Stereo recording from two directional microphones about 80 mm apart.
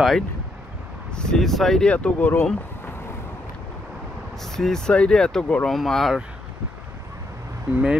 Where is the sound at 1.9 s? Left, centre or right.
Centre.